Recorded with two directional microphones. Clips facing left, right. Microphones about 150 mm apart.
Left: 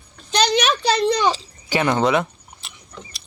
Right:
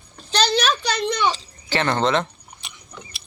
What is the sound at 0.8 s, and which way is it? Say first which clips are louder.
Speech: left 4 dB; 30° left (ahead or behind).